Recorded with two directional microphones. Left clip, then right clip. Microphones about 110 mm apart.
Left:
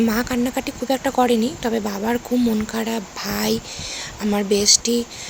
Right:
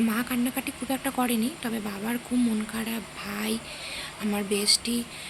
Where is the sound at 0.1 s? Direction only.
30° left (ahead or behind).